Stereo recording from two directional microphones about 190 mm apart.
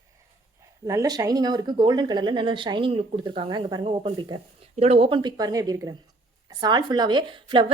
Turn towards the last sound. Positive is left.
turn(degrees=-25)  # may be behind; listen again after turning